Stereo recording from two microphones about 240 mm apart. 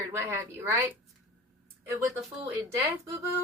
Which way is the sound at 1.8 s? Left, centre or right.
Centre.